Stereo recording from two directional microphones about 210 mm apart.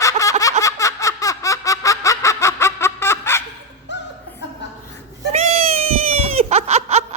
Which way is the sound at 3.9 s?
55° left (ahead or behind).